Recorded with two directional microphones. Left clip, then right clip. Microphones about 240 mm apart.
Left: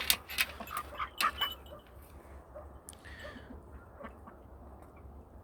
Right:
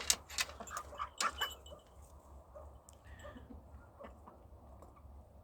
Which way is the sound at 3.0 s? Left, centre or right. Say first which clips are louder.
Left 6 dB; centre.